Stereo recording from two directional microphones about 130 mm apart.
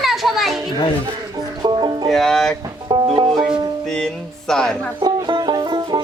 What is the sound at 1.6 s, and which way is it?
Music, 35° right (ahead or behind).